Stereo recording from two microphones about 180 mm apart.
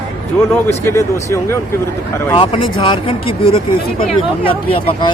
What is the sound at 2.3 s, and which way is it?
Speech, 30° left (ahead or behind).